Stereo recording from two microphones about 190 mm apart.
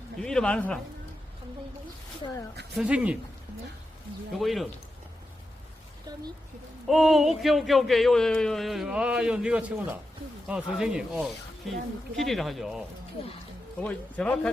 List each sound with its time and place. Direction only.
0.2 s speech: 5° left (ahead or behind)
2.2 s speech: 25° left (ahead or behind)
2.7 s speech: 5° right (ahead or behind)
4.3 s speech: centre (ahead or behind)
6.8 s speech: centre (ahead or behind)
13.8 s speech: 5° left (ahead or behind)